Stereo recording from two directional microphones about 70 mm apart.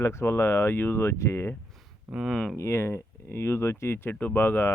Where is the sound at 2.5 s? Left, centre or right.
Left.